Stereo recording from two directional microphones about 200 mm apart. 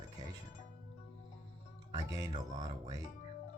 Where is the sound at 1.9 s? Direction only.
20° right (ahead or behind).